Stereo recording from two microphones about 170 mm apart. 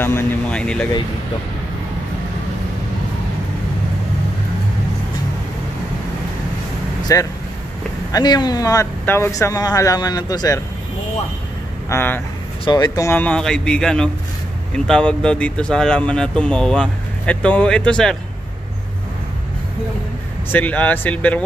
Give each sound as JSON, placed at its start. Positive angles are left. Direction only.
{"t": 0.0, "sound": "speech", "side_deg": 10}
{"t": 7.1, "sound": "speech", "side_deg": 20}
{"t": 11.9, "sound": "speech", "side_deg": 10}
{"t": 12.6, "sound": "speech", "side_deg": 25}
{"t": 20.4, "sound": "speech", "side_deg": 10}